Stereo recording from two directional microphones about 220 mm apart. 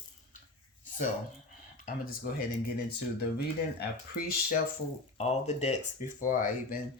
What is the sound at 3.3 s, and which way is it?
Speech, 45° left (ahead or behind).